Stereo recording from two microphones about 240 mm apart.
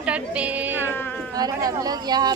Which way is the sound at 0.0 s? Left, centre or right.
Centre.